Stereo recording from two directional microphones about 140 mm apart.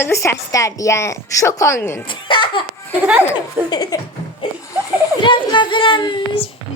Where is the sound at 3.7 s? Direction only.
30° left (ahead or behind).